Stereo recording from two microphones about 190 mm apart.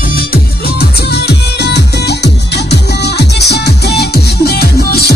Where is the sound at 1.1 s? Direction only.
60° left (ahead or behind).